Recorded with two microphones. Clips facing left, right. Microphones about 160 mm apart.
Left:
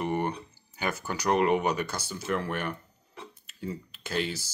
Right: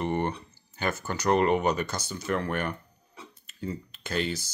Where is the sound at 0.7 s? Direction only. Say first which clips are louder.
Right 1 dB; 10° left (ahead or behind).